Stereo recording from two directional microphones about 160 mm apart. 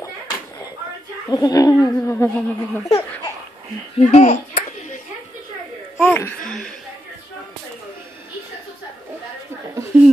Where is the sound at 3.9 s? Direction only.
45° left (ahead or behind).